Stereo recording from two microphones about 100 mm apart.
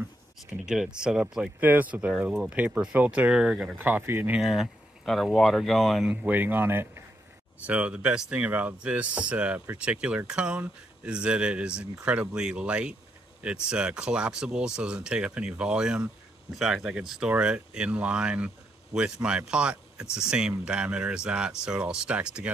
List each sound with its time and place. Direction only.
0.5 s speech: 5° right (ahead or behind)
1.6 s speech: 20° right (ahead or behind)
4.4 s speech: centre (ahead or behind)
6.0 s speech: 15° right (ahead or behind)